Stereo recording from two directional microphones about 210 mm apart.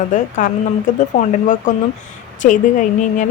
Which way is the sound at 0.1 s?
35° left (ahead or behind).